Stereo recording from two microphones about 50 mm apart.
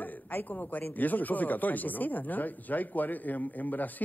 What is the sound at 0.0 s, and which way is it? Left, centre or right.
A man's voice, left.